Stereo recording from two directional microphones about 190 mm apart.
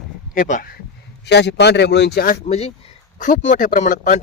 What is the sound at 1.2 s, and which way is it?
Speech, 65° left (ahead or behind).